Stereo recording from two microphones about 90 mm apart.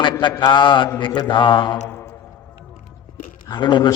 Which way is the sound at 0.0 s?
65° left (ahead or behind).